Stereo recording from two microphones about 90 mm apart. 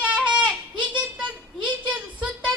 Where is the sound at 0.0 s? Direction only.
15° right (ahead or behind).